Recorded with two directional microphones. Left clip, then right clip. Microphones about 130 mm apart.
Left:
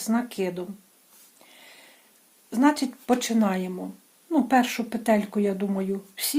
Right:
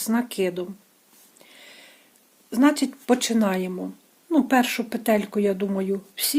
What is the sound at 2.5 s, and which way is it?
A woman's voice, 40° right (ahead or behind).